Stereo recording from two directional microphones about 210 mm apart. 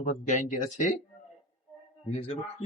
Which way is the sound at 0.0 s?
35° left (ahead or behind).